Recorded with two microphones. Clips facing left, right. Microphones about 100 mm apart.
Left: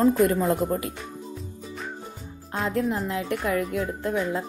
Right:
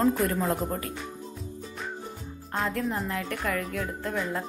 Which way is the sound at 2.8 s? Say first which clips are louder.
Left 4 dB; centre (ahead or behind).